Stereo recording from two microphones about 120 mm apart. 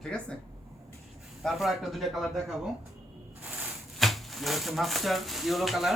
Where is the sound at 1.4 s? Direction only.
Centre (ahead or behind).